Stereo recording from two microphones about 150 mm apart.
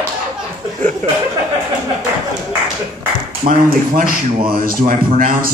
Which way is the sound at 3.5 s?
65° right (ahead or behind).